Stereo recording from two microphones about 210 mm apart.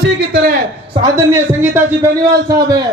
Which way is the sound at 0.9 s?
15° right (ahead or behind).